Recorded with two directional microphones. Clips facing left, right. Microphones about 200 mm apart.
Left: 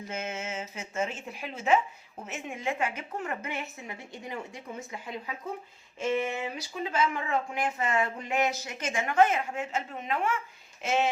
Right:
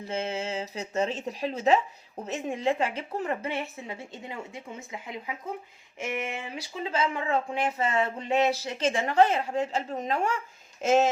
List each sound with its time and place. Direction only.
0.0 s a woman's voice: 30° right (ahead or behind)